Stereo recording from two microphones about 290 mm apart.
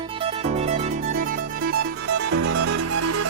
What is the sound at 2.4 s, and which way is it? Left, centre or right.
Music, right.